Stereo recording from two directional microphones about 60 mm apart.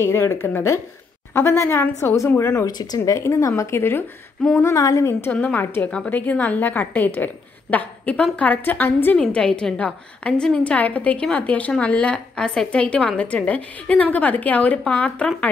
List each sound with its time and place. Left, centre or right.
0.0 s a woman's voice: left
2.6 s speech: left
3.1 s speech: left
4.4 s a woman's voice: centre
4.7 s a woman's voice: left
5.3 s a woman's voice: left
9.3 s a woman's voice: centre